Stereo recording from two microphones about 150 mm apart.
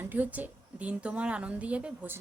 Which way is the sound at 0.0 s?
10° right (ahead or behind).